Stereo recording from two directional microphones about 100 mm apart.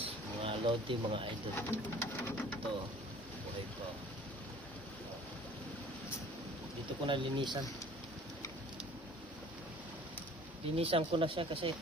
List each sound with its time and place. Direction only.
0.4 s speech: 60° right (ahead or behind)
1.5 s bird: 20° left (ahead or behind)
7.0 s speech: 55° right (ahead or behind)
10.8 s speech: 70° right (ahead or behind)